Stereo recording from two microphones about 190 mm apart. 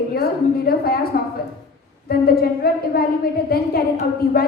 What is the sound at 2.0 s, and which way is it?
A woman's voice, 55° left (ahead or behind).